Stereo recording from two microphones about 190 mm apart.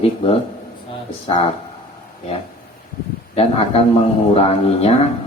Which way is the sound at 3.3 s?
30° left (ahead or behind).